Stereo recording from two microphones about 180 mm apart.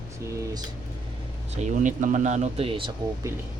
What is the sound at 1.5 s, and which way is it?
Speech, 40° right (ahead or behind).